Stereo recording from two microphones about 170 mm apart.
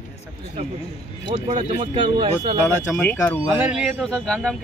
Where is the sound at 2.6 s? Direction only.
10° left (ahead or behind).